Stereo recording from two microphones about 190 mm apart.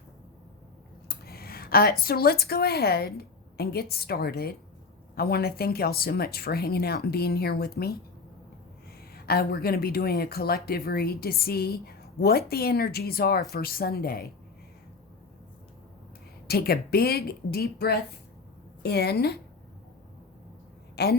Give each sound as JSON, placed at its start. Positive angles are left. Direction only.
{"t": 1.0, "sound": "speech", "side_deg": 55}
{"t": 9.1, "sound": "speech", "side_deg": 55}
{"t": 16.5, "sound": "a woman's voice", "side_deg": 55}
{"t": 20.9, "sound": "a woman's voice", "side_deg": 55}